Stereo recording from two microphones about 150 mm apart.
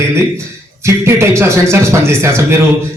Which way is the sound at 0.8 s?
15° right (ahead or behind).